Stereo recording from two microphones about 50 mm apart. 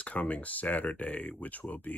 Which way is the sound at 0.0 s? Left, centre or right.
Left.